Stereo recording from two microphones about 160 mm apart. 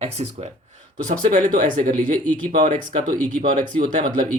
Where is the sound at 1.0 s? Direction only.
55° right (ahead or behind).